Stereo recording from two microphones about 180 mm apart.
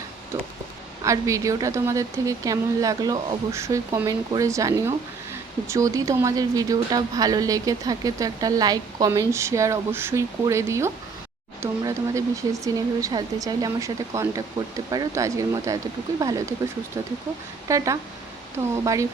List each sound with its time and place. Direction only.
1.0 s speech: 15° right (ahead or behind)